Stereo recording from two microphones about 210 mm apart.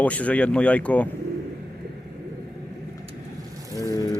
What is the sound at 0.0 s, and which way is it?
Speech, 5° left (ahead or behind).